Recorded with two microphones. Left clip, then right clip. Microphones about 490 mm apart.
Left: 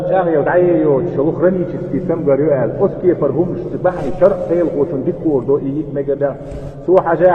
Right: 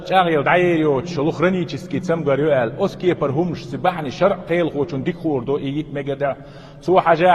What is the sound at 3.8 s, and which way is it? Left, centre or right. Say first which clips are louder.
Speech: left 5 dB; right.